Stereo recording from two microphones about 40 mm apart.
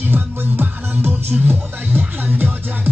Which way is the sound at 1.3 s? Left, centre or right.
Right.